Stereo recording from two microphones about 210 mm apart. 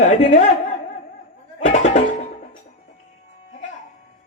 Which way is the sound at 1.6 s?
35° left (ahead or behind).